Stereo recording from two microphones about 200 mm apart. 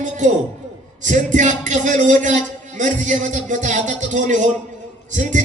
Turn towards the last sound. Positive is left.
turn(degrees=-40)  # may be behind; listen again after turning